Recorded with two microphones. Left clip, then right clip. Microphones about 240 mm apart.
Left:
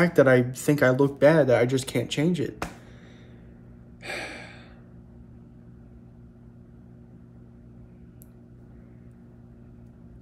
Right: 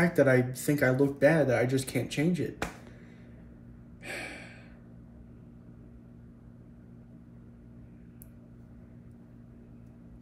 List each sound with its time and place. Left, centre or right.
0.0 s speech: centre
4.0 s gasp: centre